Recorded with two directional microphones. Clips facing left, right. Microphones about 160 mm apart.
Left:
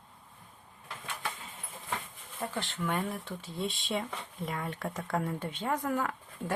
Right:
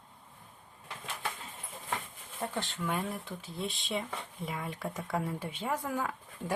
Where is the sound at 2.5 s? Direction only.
15° right (ahead or behind).